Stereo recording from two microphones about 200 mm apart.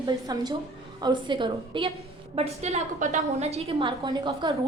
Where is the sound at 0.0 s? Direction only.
20° right (ahead or behind).